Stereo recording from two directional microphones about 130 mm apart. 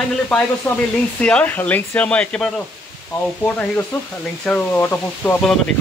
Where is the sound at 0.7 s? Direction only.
10° left (ahead or behind).